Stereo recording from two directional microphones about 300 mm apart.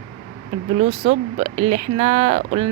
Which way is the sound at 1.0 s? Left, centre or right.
Right.